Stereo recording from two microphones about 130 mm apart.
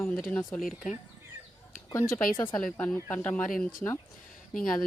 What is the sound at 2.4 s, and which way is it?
Speech, 5° left (ahead or behind).